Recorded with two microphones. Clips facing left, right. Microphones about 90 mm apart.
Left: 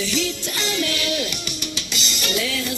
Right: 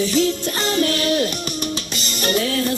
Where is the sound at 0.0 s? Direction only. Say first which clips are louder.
Right 6 dB; 45° right (ahead or behind).